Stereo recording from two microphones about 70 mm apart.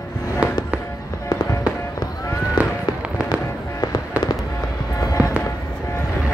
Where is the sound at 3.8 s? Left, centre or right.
Left.